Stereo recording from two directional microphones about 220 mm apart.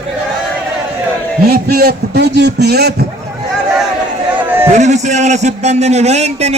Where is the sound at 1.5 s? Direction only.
45° right (ahead or behind).